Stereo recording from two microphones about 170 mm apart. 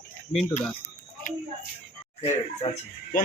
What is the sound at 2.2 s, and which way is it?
Speech, 35° left (ahead or behind).